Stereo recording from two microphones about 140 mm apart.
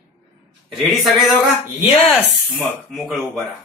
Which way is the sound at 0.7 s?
Centre (ahead or behind).